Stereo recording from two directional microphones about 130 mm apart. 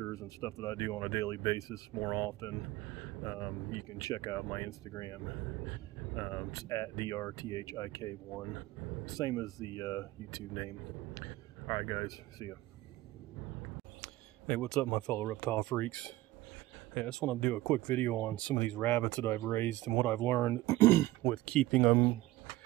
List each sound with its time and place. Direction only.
0.0 s speech: 25° left (ahead or behind)
14.0 s speech: 5° left (ahead or behind)